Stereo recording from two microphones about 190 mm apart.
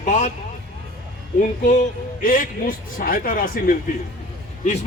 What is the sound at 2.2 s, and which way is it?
A man's voice, 45° left (ahead or behind).